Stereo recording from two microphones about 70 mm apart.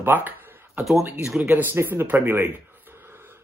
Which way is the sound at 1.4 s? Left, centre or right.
Right.